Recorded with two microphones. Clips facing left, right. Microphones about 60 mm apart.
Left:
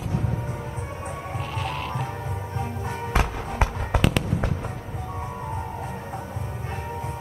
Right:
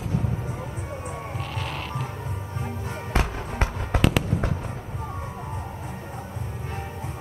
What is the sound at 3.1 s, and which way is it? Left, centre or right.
Fireworks, centre.